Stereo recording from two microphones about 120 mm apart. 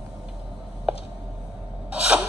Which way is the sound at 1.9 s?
10° right (ahead or behind).